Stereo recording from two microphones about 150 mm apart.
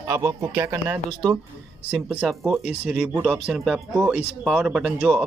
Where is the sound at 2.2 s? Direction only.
Centre (ahead or behind).